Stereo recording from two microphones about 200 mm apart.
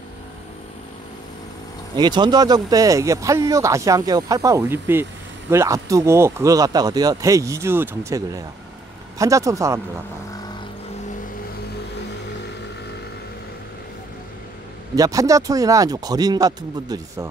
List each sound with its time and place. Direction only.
2.0 s speech: 20° right (ahead or behind)
9.2 s speech: 15° right (ahead or behind)
15.0 s speech: 15° right (ahead or behind)